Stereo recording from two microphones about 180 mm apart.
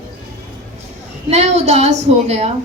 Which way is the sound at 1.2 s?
40° right (ahead or behind).